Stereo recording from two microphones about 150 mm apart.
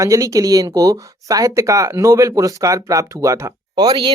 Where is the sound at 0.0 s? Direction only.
20° right (ahead or behind).